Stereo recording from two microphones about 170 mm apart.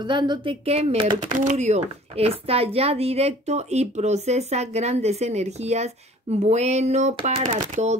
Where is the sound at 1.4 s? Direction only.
40° right (ahead or behind).